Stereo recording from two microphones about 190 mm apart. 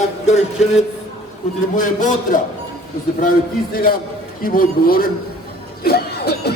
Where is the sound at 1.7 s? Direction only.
45° left (ahead or behind).